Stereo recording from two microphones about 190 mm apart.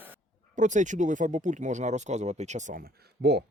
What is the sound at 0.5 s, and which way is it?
Speech, 40° right (ahead or behind).